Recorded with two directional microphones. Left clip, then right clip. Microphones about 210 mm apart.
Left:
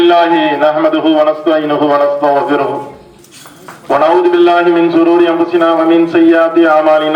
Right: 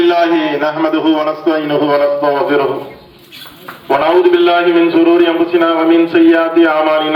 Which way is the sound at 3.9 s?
35° left (ahead or behind).